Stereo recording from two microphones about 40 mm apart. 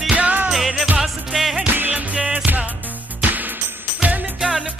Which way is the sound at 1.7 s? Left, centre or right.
Right.